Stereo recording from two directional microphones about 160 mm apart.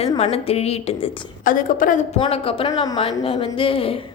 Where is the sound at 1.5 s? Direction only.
60° left (ahead or behind).